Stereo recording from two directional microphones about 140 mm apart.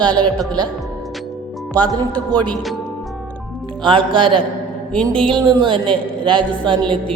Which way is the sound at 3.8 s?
35° right (ahead or behind).